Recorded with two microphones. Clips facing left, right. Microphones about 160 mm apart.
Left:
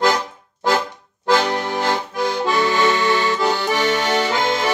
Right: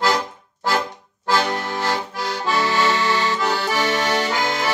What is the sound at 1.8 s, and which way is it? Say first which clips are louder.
Accordion: left 3 dB; 20° left (ahead or behind).